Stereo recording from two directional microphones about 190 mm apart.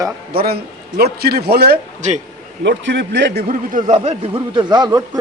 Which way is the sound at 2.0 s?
40° right (ahead or behind).